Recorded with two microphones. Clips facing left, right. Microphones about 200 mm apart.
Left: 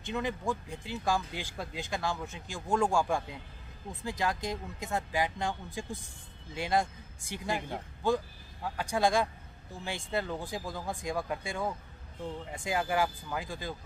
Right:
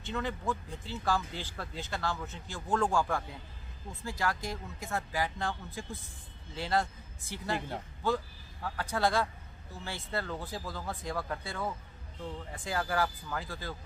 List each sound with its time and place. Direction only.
0.0 s speech: 15° left (ahead or behind)